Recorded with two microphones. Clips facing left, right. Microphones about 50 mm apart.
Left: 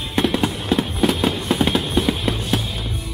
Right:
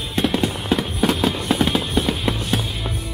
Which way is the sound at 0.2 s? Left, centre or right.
Centre.